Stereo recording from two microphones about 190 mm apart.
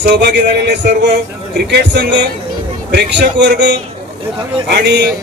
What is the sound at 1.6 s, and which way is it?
A man's voice, 65° right (ahead or behind).